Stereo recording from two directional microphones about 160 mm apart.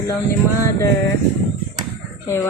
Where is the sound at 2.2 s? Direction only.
15° left (ahead or behind).